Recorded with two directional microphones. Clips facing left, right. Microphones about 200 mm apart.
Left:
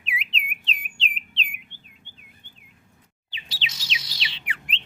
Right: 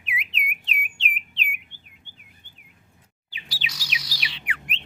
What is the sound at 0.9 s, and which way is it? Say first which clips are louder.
Bird: right 1 dB; 30° left (ahead or behind).